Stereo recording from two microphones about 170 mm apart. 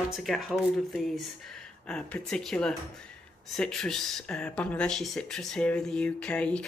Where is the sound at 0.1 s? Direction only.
Centre (ahead or behind).